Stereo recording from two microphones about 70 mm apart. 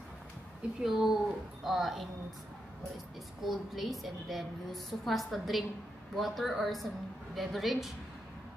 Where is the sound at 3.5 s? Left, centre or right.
Centre.